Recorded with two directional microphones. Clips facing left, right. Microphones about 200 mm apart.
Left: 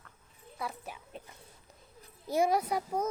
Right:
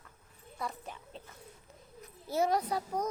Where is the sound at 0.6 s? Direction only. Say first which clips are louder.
Even; 5° left (ahead or behind).